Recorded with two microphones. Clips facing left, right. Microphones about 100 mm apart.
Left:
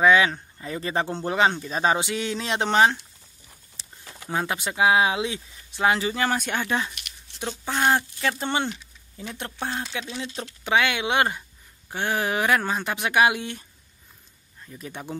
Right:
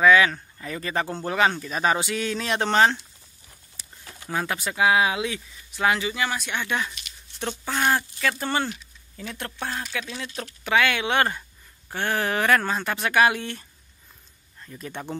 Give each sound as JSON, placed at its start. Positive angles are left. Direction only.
{"t": 0.0, "sound": "speech", "side_deg": 25}
{"t": 6.6, "sound": "speech", "side_deg": 30}
{"t": 7.3, "sound": "speech", "side_deg": 15}